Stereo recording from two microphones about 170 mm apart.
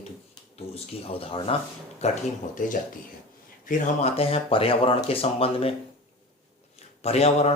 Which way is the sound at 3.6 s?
45° left (ahead or behind).